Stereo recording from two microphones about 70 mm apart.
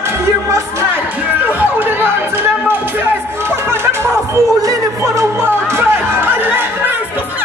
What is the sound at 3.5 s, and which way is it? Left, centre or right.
Music, right.